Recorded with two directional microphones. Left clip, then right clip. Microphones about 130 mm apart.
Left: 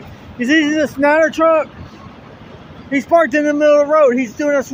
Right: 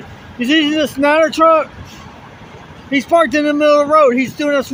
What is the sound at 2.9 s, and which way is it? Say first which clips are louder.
Speech: even; 20° right (ahead or behind).